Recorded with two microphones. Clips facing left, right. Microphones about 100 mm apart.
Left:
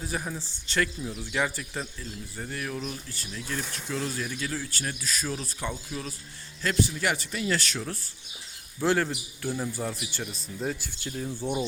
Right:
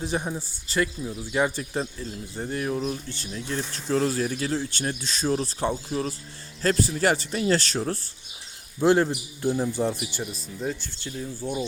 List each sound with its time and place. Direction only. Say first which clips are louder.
0.0 s speech: right 5 dB; 25° right (ahead or behind)
0.3 s speech: right 2 dB; 10° right (ahead or behind)
1.3 s speech: right 5 dB; 25° right (ahead or behind)
8.8 s speech: right 5 dB; 20° right (ahead or behind)
10.3 s speech: right 1 dB; centre (ahead or behind)
11.3 s speech: even; 15° left (ahead or behind)